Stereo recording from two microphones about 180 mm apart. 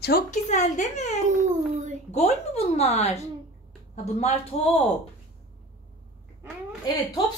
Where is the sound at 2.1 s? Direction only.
35° left (ahead or behind).